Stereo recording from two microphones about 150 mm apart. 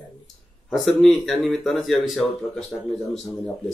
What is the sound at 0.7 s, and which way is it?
Speech, centre (ahead or behind).